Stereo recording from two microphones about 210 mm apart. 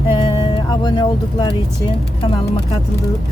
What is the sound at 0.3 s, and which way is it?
Music, 20° left (ahead or behind).